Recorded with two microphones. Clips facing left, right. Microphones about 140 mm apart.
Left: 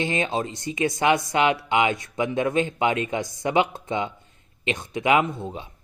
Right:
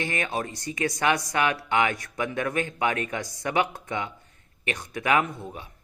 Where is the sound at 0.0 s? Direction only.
20° left (ahead or behind).